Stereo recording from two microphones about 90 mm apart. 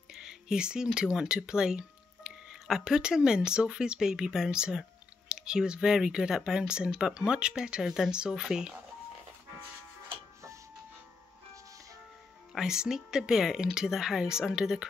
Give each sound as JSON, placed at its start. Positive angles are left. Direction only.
{"t": 0.1, "sound": "speech", "side_deg": -5}
{"t": 12.5, "sound": "speech", "side_deg": -5}